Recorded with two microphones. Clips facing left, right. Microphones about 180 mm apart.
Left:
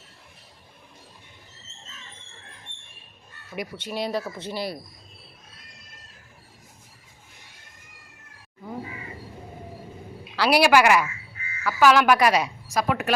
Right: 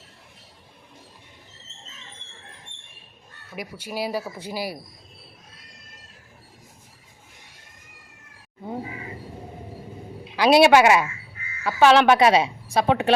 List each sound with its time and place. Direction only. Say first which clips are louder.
3.5 s speech: left 1 dB; 5° right (ahead or behind)
10.3 s speech: right 4 dB; 20° right (ahead or behind)